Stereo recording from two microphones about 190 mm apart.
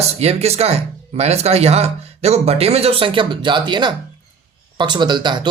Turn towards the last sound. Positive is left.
turn(degrees=-25)  # may be behind; listen again after turning